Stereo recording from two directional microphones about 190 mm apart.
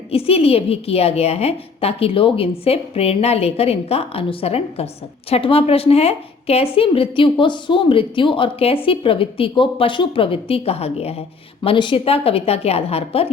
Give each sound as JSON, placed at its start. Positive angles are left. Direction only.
{"t": 0.1, "sound": "a woman's voice", "side_deg": 30}